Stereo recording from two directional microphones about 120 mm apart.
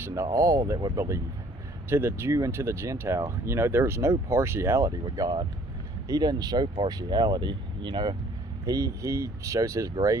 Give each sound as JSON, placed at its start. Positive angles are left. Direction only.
{"t": 0.0, "sound": "speech", "side_deg": -25}
{"t": 8.6, "sound": "speech", "side_deg": -30}